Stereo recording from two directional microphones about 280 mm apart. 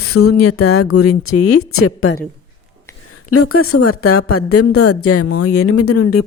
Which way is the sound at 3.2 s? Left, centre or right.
Left.